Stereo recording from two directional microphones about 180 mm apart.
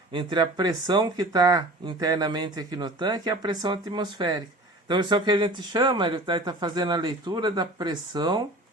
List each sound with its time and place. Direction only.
0.1 s speech: 25° right (ahead or behind)